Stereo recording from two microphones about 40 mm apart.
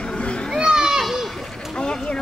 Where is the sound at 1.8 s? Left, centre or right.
Left.